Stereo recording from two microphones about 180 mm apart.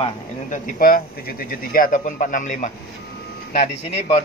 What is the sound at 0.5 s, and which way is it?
Speech, 50° left (ahead or behind).